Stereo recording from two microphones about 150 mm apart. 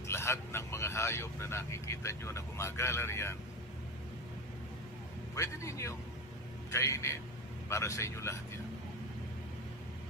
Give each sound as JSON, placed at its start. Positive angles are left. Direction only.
{"t": 0.1, "sound": "speech", "side_deg": 15}
{"t": 5.3, "sound": "a man's voice", "side_deg": 20}